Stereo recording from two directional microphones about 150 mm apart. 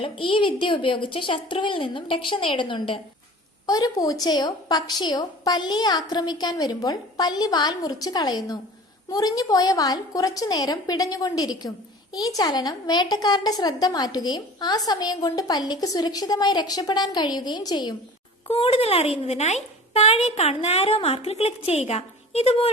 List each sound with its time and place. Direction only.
0.0 s a woman's voice: 35° left (ahead or behind)
18.4 s a woman's voice: 40° left (ahead or behind)